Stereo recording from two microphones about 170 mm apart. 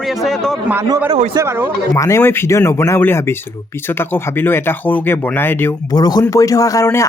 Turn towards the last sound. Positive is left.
turn(degrees=15)  # may be behind; listen again after turning